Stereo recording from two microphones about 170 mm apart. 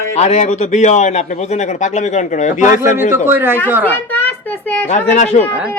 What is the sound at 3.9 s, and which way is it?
Speech, 10° left (ahead or behind).